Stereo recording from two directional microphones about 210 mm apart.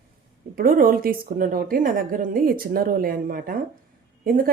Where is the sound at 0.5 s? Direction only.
40° right (ahead or behind).